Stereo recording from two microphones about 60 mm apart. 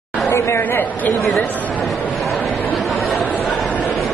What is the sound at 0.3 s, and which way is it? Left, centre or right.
Speech, left.